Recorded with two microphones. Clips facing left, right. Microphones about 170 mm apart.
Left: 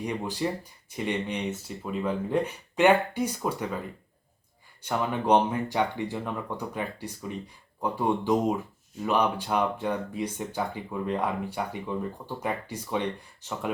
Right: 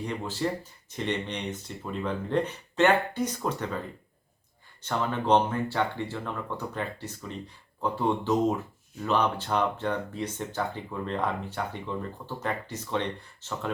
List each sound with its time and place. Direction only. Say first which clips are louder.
0.0 s speech: left 1 dB; 15° left (ahead or behind)
4.8 s speech: left 1 dB; 15° left (ahead or behind)